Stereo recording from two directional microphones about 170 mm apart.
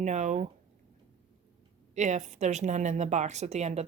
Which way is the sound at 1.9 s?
45° right (ahead or behind).